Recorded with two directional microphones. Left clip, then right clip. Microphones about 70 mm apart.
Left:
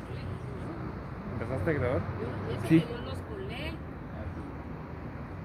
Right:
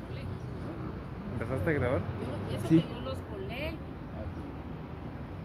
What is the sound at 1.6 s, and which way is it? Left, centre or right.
Speech, centre.